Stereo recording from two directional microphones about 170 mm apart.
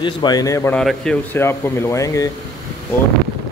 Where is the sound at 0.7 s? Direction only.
5° left (ahead or behind).